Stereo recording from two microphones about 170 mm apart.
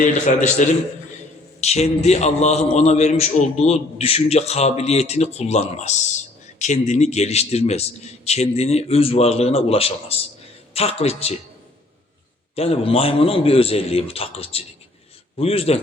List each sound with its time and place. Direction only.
0.0 s a man's voice: 45° left (ahead or behind)
12.5 s a man's voice: 35° left (ahead or behind)